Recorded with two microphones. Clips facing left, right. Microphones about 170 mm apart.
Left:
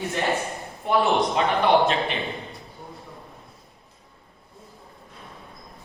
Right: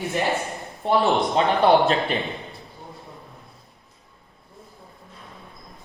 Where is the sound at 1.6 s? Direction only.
35° right (ahead or behind).